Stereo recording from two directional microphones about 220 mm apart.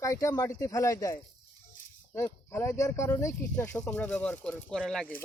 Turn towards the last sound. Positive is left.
turn(degrees=0)  # may be behind; listen again after turning